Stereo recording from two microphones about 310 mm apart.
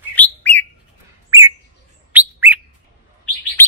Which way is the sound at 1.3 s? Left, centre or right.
Centre.